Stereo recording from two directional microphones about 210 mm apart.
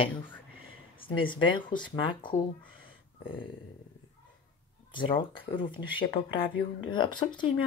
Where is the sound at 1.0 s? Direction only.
25° left (ahead or behind).